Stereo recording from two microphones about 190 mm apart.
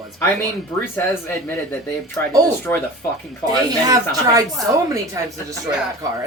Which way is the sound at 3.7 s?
20° right (ahead or behind).